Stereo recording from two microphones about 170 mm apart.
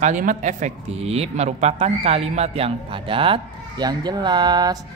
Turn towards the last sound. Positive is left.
turn(degrees=-25)  # may be behind; listen again after turning